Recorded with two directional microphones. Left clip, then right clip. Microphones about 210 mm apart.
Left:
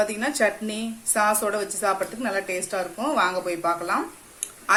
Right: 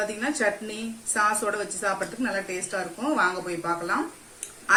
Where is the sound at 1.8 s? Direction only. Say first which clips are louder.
Left 3 dB; 50° left (ahead or behind).